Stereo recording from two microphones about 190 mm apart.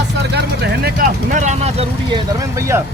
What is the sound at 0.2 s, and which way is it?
Speech, 60° right (ahead or behind).